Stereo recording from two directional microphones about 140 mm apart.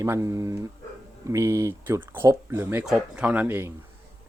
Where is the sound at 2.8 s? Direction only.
5° right (ahead or behind).